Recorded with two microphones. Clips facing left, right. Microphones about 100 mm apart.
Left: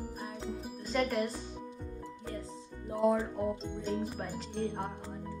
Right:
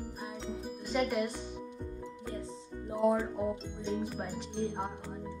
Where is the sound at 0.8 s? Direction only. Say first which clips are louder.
Even; 10° right (ahead or behind).